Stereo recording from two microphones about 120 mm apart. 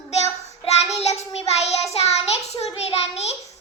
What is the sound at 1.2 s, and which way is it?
Child singing, 65° left (ahead or behind).